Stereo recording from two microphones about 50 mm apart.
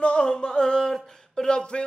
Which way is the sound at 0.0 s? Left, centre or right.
Left.